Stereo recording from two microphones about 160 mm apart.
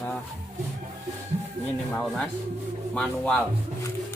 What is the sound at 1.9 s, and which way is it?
A man's voice, centre (ahead or behind).